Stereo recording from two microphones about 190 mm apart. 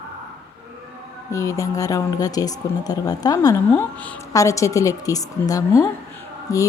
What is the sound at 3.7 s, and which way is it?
A woman's voice, 10° left (ahead or behind).